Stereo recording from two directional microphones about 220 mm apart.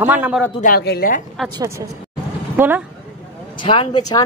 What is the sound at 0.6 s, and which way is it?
Speech, 45° left (ahead or behind).